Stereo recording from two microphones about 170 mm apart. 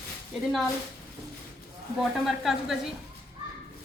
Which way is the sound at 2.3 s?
Centre (ahead or behind).